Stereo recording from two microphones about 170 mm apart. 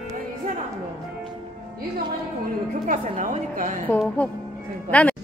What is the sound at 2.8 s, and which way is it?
Speech, 50° right (ahead or behind).